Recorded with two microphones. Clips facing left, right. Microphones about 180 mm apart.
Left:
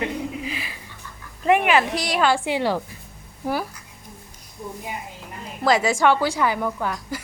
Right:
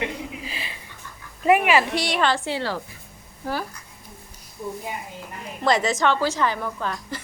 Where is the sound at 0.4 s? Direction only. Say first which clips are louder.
Left 4 dB; 30° right (ahead or behind).